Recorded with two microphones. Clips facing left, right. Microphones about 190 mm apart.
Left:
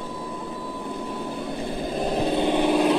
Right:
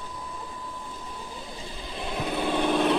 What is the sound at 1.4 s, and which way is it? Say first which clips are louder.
Vehicle: left 11 dB; 60° left (ahead or behind).